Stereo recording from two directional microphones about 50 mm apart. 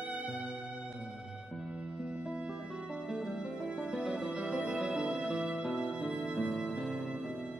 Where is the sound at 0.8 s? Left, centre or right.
Centre.